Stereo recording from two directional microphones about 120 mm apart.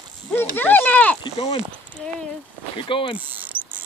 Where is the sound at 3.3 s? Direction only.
15° right (ahead or behind).